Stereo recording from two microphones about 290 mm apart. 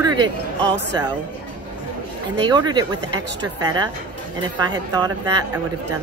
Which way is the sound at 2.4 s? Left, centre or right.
Centre.